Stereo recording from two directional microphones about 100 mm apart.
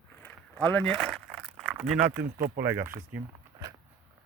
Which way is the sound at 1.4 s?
5° right (ahead or behind).